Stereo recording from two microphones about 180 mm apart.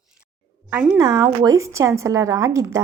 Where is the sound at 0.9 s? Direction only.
20° right (ahead or behind).